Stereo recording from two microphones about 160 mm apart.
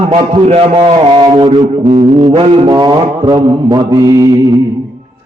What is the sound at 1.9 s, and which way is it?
Mantra, 40° right (ahead or behind).